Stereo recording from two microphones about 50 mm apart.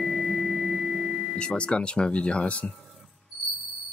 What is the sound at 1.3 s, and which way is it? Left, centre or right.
Speech, centre.